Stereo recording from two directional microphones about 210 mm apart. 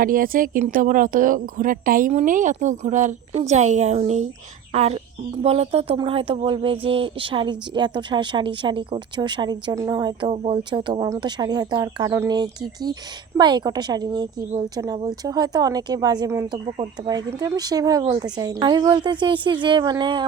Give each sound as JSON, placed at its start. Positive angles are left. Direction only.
{"t": 0.0, "sound": "speech", "side_deg": -40}